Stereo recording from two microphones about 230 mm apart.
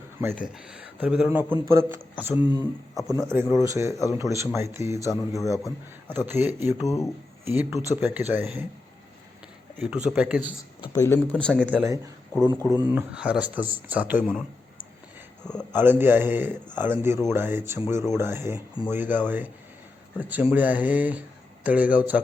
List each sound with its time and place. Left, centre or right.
0.2 s a man's voice: centre
2.3 s speech: centre
3.1 s a man's voice: centre
5.4 s a man's voice: centre
6.2 s a man's voice: centre
6.8 s a man's voice: centre
7.4 s a man's voice: centre
9.7 s speech: centre
10.9 s speech: centre
11.8 s a man's voice: centre
12.3 s a man's voice: centre
12.9 s a man's voice: centre
14.3 s a sound: centre
15.7 s a man's voice: centre